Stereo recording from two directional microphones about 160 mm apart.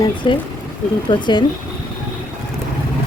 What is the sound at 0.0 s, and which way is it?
Speech, 30° left (ahead or behind).